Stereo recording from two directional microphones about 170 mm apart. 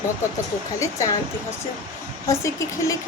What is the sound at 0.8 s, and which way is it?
Speech, 20° left (ahead or behind).